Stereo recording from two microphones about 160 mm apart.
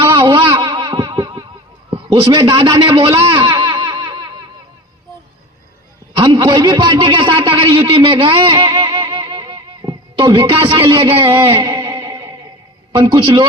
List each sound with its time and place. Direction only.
0.0 s music: 30° right (ahead or behind)
2.0 s a man's voice: 20° right (ahead or behind)
3.2 s a sound: 30° right (ahead or behind)
6.1 s a man's voice: 25° right (ahead or behind)